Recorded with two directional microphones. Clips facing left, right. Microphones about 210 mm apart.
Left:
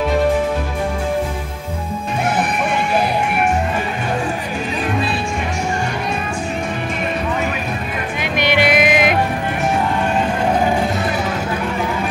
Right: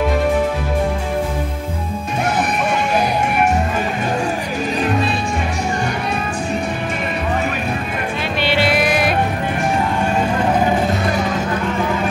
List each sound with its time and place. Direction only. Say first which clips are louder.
8.2 s vehicle: left 2 dB; 15° left (ahead or behind)